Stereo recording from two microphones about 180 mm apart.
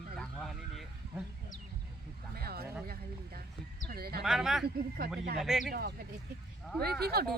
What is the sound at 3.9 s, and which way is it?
Speech, 60° right (ahead or behind).